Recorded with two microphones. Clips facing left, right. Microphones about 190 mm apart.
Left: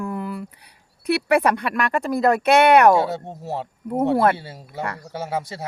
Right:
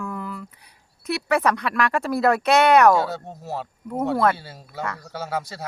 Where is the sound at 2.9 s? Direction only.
25° left (ahead or behind).